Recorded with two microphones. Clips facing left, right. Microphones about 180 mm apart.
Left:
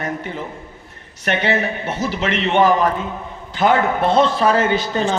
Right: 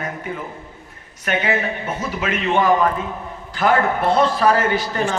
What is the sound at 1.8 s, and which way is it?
Speech, 80° left.